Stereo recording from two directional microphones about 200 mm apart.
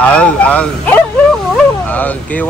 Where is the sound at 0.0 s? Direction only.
5° left (ahead or behind).